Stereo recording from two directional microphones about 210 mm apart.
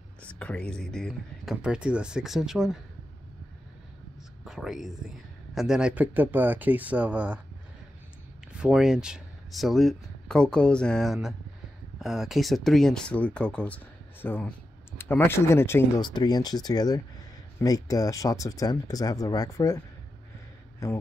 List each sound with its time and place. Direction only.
0.2 s speech: 5° left (ahead or behind)
4.5 s speech: centre (ahead or behind)
8.5 s speech: 5° right (ahead or behind); by 19.8 s 15° left (ahead or behind)
20.8 s speech: 15° left (ahead or behind)